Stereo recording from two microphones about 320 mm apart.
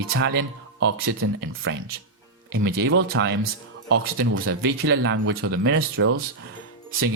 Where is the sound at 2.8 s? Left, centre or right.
Right.